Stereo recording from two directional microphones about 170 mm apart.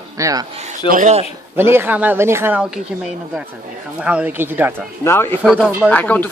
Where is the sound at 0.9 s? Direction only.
45° right (ahead or behind).